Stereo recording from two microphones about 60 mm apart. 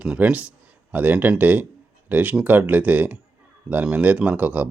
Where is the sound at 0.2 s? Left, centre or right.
Right.